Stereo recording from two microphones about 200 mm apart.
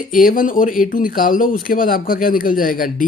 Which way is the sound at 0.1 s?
45° left (ahead or behind).